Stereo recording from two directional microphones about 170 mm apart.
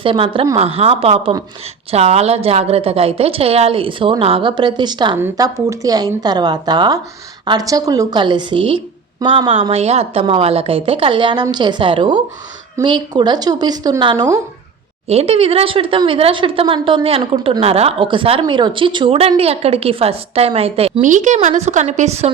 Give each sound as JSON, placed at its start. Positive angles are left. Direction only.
{"t": 0.0, "sound": "a woman's voice", "side_deg": -30}
{"t": 15.0, "sound": "a woman's voice", "side_deg": -35}